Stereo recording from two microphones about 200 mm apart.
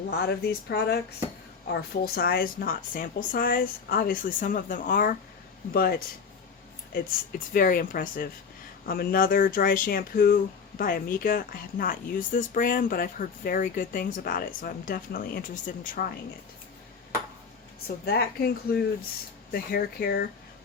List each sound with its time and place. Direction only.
0.1 s speech: 50° left (ahead or behind)
17.8 s speech: 50° left (ahead or behind)